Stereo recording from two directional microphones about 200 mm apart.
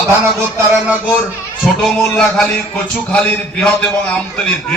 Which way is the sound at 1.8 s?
Centre (ahead or behind).